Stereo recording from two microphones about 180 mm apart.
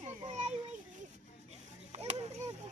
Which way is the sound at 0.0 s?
40° right (ahead or behind).